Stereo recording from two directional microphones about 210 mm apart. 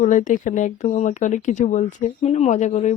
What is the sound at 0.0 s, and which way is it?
Speech, 35° left (ahead or behind).